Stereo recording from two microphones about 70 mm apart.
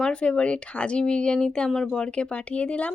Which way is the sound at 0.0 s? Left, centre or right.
Centre.